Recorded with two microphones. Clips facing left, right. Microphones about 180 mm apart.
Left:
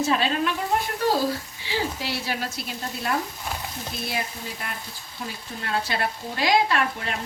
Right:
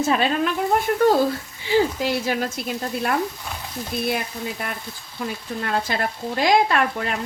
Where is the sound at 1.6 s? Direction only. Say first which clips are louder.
Right 9 dB; 50° right (ahead or behind).